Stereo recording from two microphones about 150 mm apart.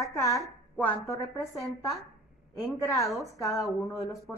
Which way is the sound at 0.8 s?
20° left (ahead or behind).